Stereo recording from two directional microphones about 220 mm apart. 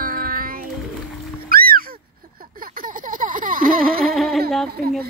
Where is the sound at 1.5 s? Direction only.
40° right (ahead or behind).